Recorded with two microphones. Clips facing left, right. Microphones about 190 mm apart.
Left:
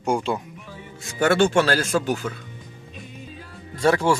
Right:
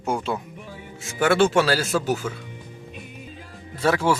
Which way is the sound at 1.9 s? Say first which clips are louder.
Even; 5° right (ahead or behind).